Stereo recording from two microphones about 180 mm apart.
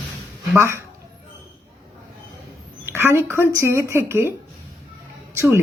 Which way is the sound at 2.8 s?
15° right (ahead or behind).